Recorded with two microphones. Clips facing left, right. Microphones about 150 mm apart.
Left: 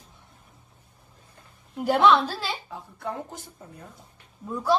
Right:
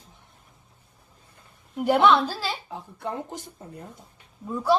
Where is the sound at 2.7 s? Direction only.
20° right (ahead or behind).